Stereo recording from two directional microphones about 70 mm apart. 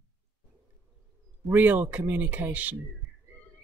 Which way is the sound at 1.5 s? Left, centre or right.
Right.